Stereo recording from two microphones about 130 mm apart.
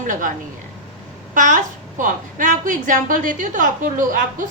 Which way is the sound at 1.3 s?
85° right.